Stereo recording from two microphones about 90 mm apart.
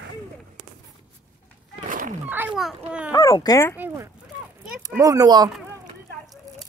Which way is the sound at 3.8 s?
35° right (ahead or behind).